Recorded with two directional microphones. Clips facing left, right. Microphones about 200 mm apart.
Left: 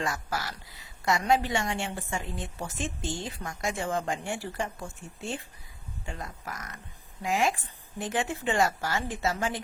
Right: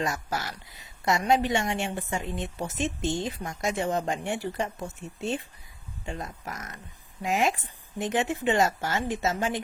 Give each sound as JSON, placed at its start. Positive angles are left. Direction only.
{"t": 0.0, "sound": "a woman's voice", "side_deg": -25}